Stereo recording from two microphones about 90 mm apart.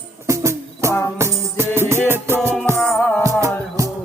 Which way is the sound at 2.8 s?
5° left (ahead or behind).